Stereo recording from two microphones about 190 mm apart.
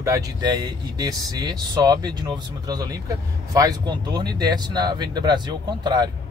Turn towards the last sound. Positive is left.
turn(degrees=-20)  # may be behind; listen again after turning